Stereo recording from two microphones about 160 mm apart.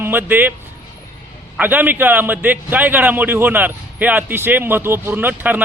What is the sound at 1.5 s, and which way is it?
A man's voice, 10° right (ahead or behind).